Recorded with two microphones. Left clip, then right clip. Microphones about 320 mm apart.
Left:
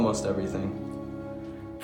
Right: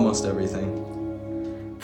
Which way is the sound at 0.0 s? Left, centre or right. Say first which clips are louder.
Right 3 dB; right.